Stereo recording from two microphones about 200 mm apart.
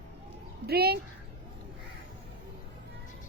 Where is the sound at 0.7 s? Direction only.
50° right (ahead or behind).